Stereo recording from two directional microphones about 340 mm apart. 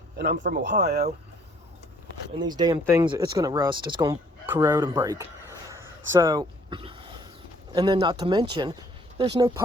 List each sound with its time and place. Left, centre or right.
0.2 s speech: right
2.4 s speech: centre